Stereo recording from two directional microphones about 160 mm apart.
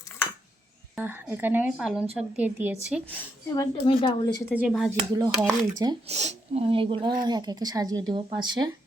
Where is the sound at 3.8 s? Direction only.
30° left (ahead or behind).